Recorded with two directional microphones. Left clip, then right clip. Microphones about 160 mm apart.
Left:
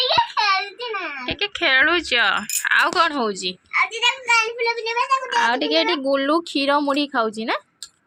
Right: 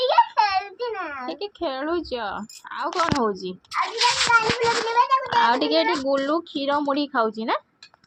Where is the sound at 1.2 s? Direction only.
15° right (ahead or behind).